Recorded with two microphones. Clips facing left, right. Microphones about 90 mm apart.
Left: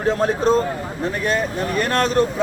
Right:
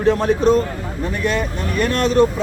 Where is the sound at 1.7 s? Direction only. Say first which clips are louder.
Right 2 dB; 40° left (ahead or behind).